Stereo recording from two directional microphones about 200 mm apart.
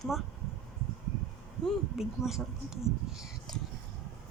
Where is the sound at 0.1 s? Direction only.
Centre (ahead or behind).